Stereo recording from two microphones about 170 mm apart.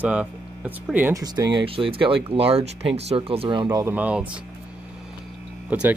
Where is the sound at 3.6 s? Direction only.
15° right (ahead or behind).